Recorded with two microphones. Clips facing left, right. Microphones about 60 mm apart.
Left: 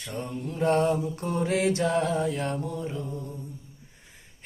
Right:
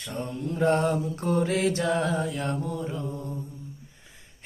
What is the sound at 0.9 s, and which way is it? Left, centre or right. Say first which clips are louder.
Mantra: right 1 dB; right.